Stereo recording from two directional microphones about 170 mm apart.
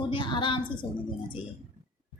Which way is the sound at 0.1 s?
30° left (ahead or behind).